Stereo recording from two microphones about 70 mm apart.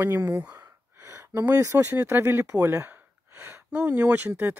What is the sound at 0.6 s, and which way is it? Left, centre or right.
Speech, right.